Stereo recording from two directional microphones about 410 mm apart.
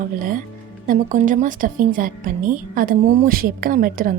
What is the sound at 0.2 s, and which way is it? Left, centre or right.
A woman's voice, centre.